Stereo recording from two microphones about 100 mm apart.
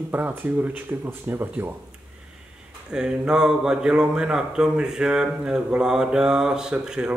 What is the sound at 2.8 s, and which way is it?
Speech, 10° right (ahead or behind).